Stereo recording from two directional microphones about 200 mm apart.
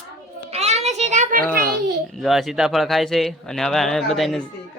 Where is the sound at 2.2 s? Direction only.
Centre (ahead or behind).